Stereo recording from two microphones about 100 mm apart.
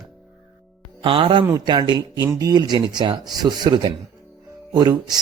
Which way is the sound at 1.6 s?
45° right (ahead or behind).